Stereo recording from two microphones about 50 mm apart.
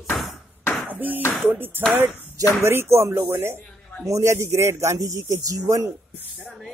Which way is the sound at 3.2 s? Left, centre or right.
Right.